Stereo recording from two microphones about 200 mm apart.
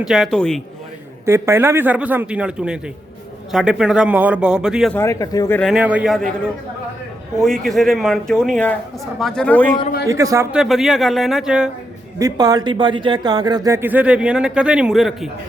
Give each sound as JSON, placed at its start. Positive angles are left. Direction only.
{"t": 0.0, "sound": "speech", "side_deg": 0}
{"t": 1.2, "sound": "speech", "side_deg": -15}
{"t": 4.9, "sound": "speech", "side_deg": 15}
{"t": 5.5, "sound": "speech", "side_deg": 0}
{"t": 7.3, "sound": "speech", "side_deg": 0}
{"t": 10.1, "sound": "speech", "side_deg": -15}
{"t": 10.6, "sound": "speech", "side_deg": 0}
{"t": 12.2, "sound": "speech", "side_deg": -20}